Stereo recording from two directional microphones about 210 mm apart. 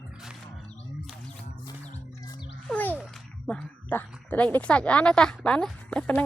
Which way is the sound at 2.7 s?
10° left (ahead or behind).